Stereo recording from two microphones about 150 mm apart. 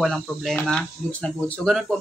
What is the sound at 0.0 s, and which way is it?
Speech, centre (ahead or behind).